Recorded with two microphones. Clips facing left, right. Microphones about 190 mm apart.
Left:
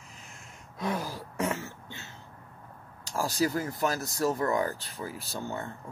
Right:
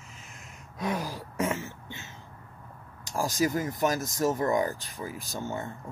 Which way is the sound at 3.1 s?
15° right (ahead or behind).